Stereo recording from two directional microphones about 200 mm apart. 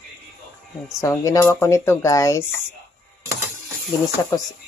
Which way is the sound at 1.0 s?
15° left (ahead or behind).